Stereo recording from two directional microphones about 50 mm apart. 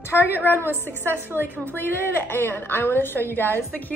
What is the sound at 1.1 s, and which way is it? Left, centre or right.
Speech, right.